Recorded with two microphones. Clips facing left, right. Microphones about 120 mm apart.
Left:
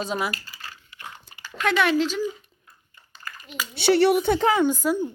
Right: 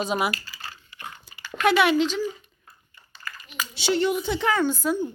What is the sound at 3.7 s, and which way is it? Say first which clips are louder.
Speech: left 5 dB; 60° left (ahead or behind).